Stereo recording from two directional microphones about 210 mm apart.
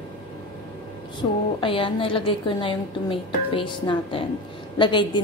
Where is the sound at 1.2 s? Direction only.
20° left (ahead or behind).